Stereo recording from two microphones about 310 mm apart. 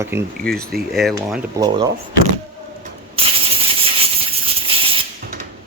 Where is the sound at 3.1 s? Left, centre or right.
Centre.